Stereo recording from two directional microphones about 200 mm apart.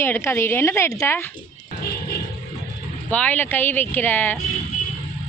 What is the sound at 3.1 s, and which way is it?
A woman's voice, 5° left (ahead or behind).